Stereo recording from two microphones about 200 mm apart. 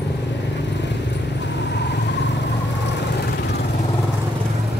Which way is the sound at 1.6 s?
60° left (ahead or behind).